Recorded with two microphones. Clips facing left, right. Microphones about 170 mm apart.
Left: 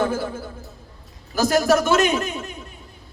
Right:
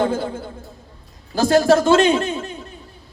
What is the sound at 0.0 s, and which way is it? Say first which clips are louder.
A man's voice: right 2 dB; 25° right (ahead or behind).